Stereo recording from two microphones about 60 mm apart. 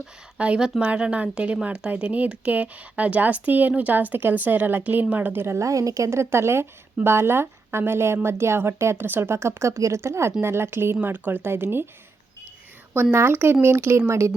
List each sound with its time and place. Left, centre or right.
0.3 s speech: centre; by 5.5 s right
5.5 s a woman's voice: right
9.0 s speech: right
9.3 s a woman's voice: right
11.0 s speech: right
12.9 s a woman's voice: right
14.1 s a woman's voice: right